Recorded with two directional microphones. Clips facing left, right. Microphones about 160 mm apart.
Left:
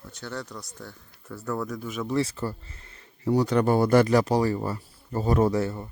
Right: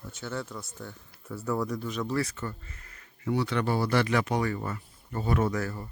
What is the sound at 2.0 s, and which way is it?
Speech, 25° left (ahead or behind).